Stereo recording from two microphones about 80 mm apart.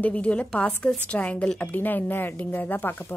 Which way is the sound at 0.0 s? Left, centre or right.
Centre.